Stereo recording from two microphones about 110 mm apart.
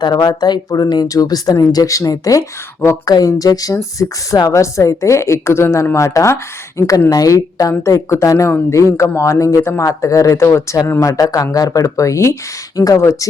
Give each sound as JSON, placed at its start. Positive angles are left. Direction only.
{"t": 0.0, "sound": "a woman's voice", "side_deg": 40}